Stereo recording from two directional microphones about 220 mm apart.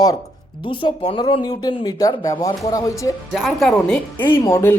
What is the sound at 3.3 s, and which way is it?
Speech, centre (ahead or behind).